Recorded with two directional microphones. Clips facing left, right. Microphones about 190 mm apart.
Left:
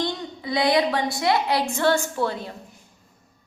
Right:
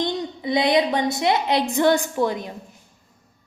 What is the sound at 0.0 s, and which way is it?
A woman's voice, 20° right (ahead or behind).